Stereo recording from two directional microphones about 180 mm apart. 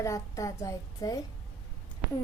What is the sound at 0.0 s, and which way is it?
A woman's voice, 15° left (ahead or behind).